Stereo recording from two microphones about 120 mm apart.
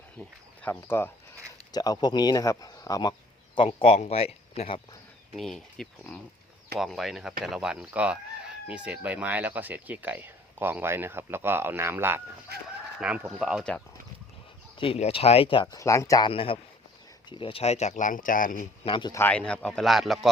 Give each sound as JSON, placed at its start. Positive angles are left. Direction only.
{"t": 0.7, "sound": "speech", "side_deg": 20}
{"t": 1.7, "sound": "speech", "side_deg": 35}
{"t": 3.7, "sound": "speech", "side_deg": 55}
{"t": 5.4, "sound": "speech", "side_deg": 5}
{"t": 14.9, "sound": "speech", "side_deg": 55}
{"t": 15.6, "sound": "speech", "side_deg": 30}
{"t": 16.2, "sound": "a man's voice", "side_deg": 50}
{"t": 18.9, "sound": "a man's voice", "side_deg": 45}
{"t": 19.3, "sound": "speech", "side_deg": 10}